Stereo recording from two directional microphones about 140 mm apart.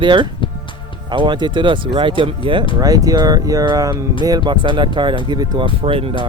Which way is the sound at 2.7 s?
25° right (ahead or behind).